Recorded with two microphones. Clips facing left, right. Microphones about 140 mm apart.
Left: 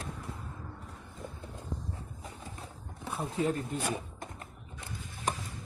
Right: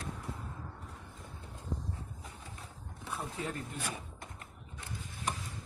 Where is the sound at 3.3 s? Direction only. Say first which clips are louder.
Left 8 dB; 25° left (ahead or behind).